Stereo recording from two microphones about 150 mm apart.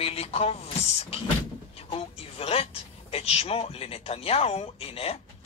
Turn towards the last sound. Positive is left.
turn(degrees=40)  # may be behind; listen again after turning